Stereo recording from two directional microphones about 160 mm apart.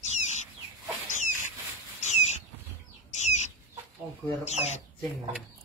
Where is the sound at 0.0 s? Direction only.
45° left (ahead or behind).